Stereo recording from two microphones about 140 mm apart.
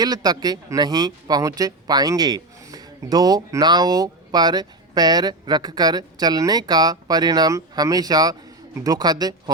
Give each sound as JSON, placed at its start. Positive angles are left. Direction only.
{"t": 0.0, "sound": "speech", "side_deg": -30}